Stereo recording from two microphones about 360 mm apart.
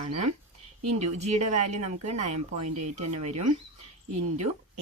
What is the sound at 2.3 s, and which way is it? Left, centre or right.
Speech, right.